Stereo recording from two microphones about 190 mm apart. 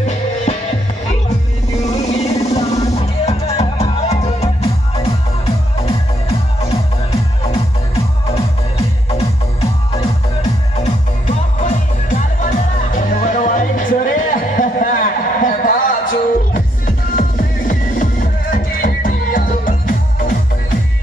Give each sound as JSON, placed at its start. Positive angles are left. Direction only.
{"t": 1.9, "sound": "music", "side_deg": 35}
{"t": 5.9, "sound": "music", "side_deg": 30}
{"t": 9.9, "sound": "music", "side_deg": 35}